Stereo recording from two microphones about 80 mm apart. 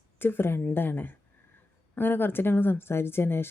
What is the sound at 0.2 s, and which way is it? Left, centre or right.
Speech, left.